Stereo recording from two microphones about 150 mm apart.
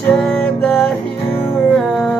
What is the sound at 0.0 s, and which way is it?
Music, 10° left (ahead or behind).